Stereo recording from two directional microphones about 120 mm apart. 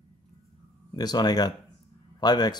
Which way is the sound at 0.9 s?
35° left (ahead or behind).